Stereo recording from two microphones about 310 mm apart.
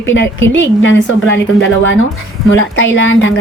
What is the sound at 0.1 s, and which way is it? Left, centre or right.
Speech, left.